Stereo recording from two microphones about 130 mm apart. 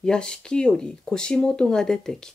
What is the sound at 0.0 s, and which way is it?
Speech, 5° left (ahead or behind).